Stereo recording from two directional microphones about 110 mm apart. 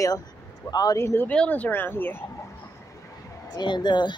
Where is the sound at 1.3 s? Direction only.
10° left (ahead or behind).